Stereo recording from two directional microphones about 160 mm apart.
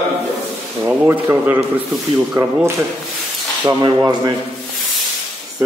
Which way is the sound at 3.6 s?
20° right (ahead or behind).